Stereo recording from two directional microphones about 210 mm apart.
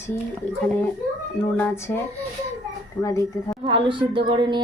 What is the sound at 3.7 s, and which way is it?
Speech, 25° right (ahead or behind).